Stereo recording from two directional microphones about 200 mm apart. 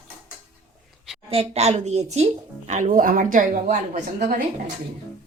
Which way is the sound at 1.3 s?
30° right (ahead or behind).